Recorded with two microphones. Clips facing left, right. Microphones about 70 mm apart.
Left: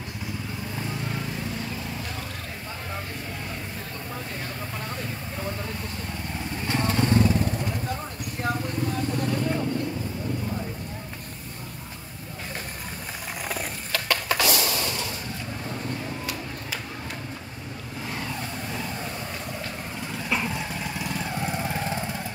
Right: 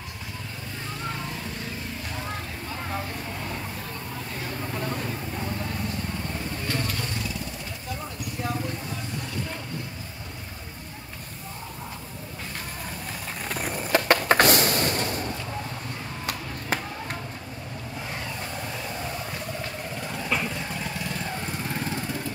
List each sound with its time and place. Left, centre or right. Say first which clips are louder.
6.7 s vehicle: left 10 dB; left
13.5 s skateboard: right 2 dB; centre
13.9 s a sound: right 6 dB; right
20.2 s vehicle: left 1 dB; centre